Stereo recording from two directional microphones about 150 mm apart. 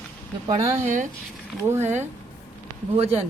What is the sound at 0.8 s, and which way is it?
Speech, 55° right (ahead or behind).